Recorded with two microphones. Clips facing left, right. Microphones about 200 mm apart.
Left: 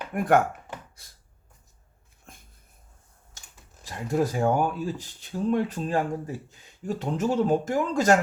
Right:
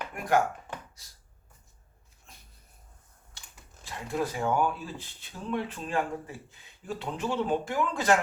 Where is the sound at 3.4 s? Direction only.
45° left (ahead or behind).